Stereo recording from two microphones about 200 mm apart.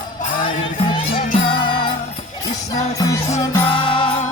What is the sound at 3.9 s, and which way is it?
Music, 25° left (ahead or behind).